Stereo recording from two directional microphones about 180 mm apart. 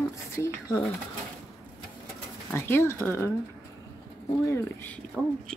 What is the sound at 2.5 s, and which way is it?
Speech, 15° left (ahead or behind).